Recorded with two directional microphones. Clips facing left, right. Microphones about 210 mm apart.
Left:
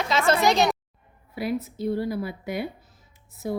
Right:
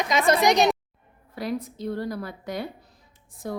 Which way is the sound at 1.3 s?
10° left (ahead or behind).